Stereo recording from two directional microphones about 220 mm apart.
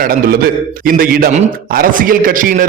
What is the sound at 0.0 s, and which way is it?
A man's voice, 40° right (ahead or behind).